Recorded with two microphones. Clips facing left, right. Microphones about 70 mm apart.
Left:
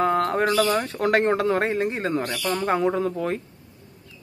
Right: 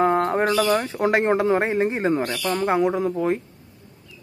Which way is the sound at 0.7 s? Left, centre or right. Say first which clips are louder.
Right 1 dB; centre.